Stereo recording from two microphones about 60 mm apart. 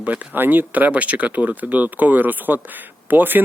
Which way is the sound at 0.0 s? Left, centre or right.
Right.